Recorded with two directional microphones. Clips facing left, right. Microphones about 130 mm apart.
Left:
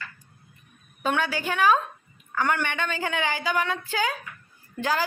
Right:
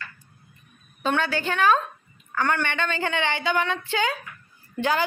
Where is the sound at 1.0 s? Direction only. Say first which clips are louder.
Right 1 dB; 10° left (ahead or behind).